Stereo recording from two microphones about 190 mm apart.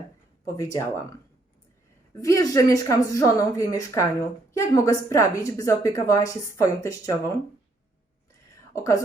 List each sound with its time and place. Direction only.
0.4 s a woman's voice: 15° left (ahead or behind)
2.2 s a woman's voice: 20° left (ahead or behind)
8.7 s speech: 15° left (ahead or behind)